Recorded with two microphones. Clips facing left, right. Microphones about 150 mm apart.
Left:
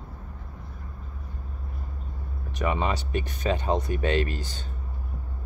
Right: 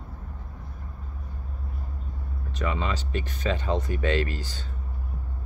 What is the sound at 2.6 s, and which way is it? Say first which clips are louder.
Speech: left 3 dB; 20° left (ahead or behind).